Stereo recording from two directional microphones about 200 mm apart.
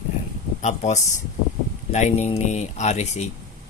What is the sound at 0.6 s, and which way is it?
Speech, 35° left (ahead or behind).